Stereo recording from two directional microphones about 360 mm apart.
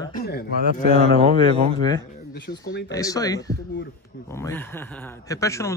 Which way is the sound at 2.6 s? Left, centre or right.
Left.